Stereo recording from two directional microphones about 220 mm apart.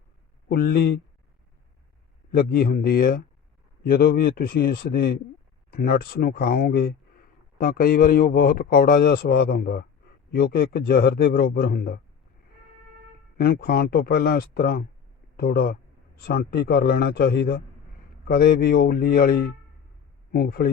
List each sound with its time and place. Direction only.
0.4 s a man's voice: 40° left (ahead or behind)
2.3 s a man's voice: 40° left (ahead or behind)
13.3 s a man's voice: 40° left (ahead or behind)